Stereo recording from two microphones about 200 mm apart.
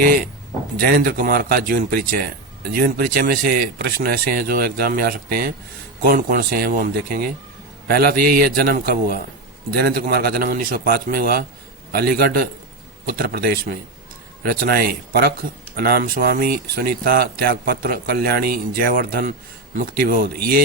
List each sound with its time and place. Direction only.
0.8 s speech: 50° right (ahead or behind)